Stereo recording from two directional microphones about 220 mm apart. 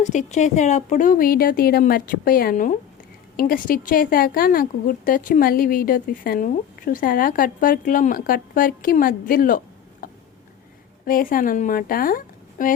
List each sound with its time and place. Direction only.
0.0 s a woman's voice: 35° left (ahead or behind)
10.0 s a sound: 40° left (ahead or behind)
11.0 s a woman's voice: 40° left (ahead or behind)